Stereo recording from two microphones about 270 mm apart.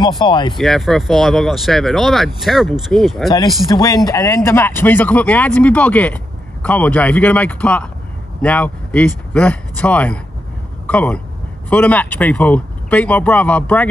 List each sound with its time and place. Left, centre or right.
0.2 s speech: centre
0.6 s speech: centre
3.7 s speech: centre